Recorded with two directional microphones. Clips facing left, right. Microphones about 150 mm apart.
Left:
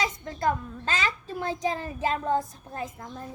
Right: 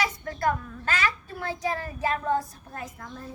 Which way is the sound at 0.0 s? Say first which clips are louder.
Even; 20° left (ahead or behind).